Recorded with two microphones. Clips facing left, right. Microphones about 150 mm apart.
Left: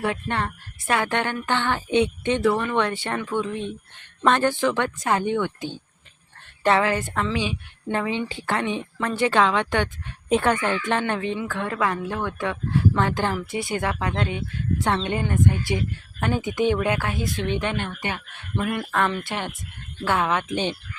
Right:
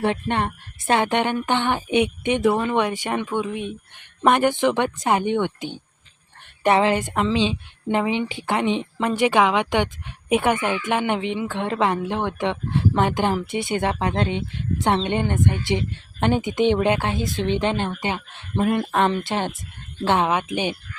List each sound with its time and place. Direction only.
0.0 s speech: 25° right (ahead or behind)